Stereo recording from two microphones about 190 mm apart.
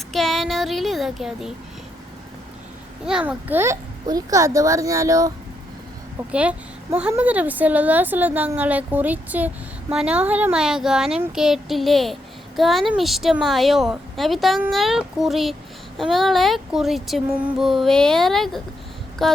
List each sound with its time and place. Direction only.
0.1 s speech: centre (ahead or behind)
3.1 s a woman's voice: 5° right (ahead or behind)
6.3 s a woman's voice: 5° right (ahead or behind)